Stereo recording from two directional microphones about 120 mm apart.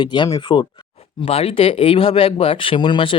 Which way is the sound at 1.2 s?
55° left (ahead or behind).